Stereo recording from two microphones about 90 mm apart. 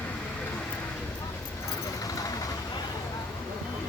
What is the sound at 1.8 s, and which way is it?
Vehicle, 40° left (ahead or behind).